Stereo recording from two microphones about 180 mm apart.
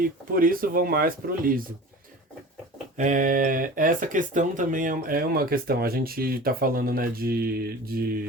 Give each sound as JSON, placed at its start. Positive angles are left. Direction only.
{"t": 0.0, "sound": "speech", "side_deg": -50}
{"t": 3.0, "sound": "speech", "side_deg": -45}